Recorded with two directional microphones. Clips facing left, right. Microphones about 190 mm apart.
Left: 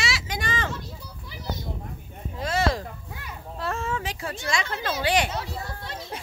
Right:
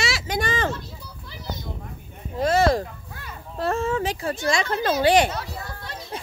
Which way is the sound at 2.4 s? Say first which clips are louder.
Right 6 dB; 50° right (ahead or behind).